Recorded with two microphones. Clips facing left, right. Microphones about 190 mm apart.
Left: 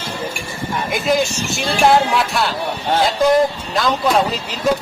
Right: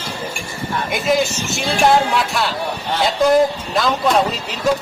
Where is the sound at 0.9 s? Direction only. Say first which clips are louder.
Even; centre (ahead or behind).